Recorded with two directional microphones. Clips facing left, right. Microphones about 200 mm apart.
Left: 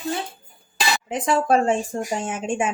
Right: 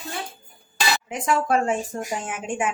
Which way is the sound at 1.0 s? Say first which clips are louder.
Left 4 dB; 30° left (ahead or behind).